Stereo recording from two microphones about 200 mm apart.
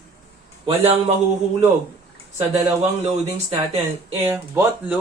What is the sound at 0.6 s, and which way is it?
Speech, 30° right (ahead or behind).